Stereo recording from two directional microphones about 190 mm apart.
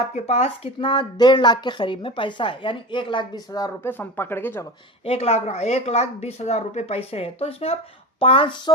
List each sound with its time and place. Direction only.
0.1 s speech: 35° left (ahead or behind); by 4.6 s 10° left (ahead or behind)
5.0 s speech: 30° left (ahead or behind)